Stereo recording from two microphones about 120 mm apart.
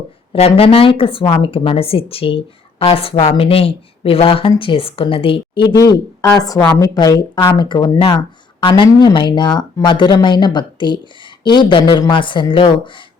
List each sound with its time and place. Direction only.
0.3 s speech: 55° left (ahead or behind); by 7.9 s 40° left (ahead or behind)
7.9 s speech: 50° left (ahead or behind)